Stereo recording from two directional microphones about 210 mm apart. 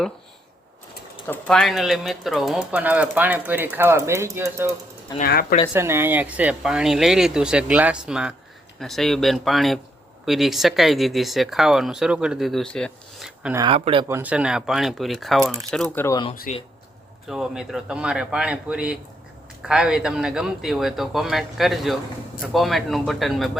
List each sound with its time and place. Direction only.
1.3 s speech: 5° left (ahead or behind); by 4.7 s 10° right (ahead or behind)
5.2 s speech: 45° left (ahead or behind)
5.7 s speech: 10° right (ahead or behind)
13.6 s speech: 25° right (ahead or behind)
14.1 s speech: 10° right (ahead or behind)
16.0 s speech: 20° left (ahead or behind)
16.3 s speech: 40° left (ahead or behind)
17.2 s speech: centre (ahead or behind)